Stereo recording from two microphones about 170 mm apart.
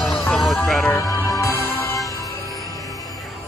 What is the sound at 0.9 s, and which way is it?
Music, 15° left (ahead or behind).